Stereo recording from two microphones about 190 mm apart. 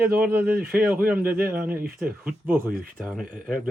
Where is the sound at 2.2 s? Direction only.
10° right (ahead or behind).